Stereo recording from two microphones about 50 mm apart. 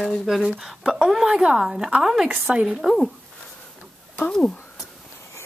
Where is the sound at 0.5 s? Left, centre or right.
Centre.